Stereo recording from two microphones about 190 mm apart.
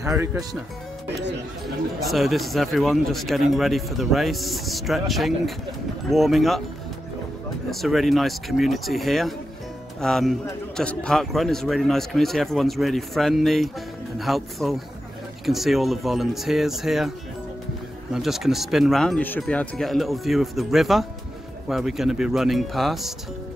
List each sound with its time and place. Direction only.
0.0 s speech: 15° right (ahead or behind)
1.0 s speech: 65° right (ahead or behind)
2.0 s speech: centre (ahead or behind)
7.7 s speech: centre (ahead or behind)
18.1 s speech: centre (ahead or behind)